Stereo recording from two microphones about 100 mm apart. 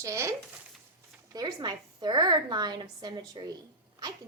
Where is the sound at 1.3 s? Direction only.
45° right (ahead or behind).